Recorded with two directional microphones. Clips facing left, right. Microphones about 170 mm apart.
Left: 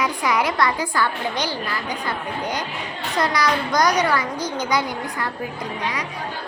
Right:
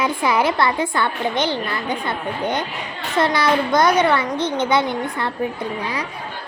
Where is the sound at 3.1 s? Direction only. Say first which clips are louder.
Right 4 dB; 25° right (ahead or behind).